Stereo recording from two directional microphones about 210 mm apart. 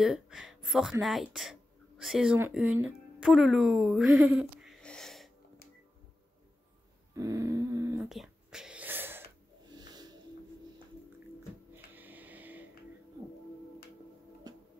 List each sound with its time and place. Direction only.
0.0 s speech: centre (ahead or behind)
7.2 s a sound: 15° right (ahead or behind)
8.0 s whispering: centre (ahead or behind)
9.8 s music: 20° right (ahead or behind)
11.7 s a sound: 10° right (ahead or behind)
14.5 s music: 20° right (ahead or behind)